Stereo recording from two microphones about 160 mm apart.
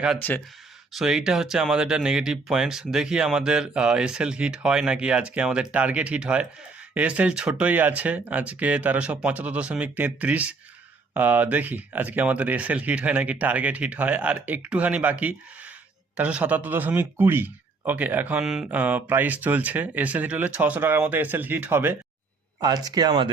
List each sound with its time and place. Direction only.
0.2 s speech: 10° left (ahead or behind)
0.9 s speech: 5° right (ahead or behind)
22.6 s speech: 25° right (ahead or behind)